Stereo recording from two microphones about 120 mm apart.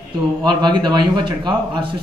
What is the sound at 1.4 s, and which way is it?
Speech, 45° right (ahead or behind).